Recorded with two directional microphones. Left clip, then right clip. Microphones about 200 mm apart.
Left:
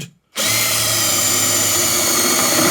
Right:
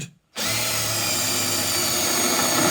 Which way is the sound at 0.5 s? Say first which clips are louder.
Left 7 dB; 35° left (ahead or behind).